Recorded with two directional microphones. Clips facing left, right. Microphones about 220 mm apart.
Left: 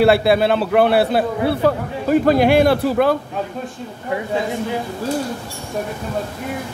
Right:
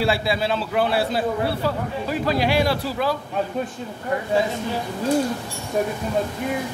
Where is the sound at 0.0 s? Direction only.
60° left (ahead or behind).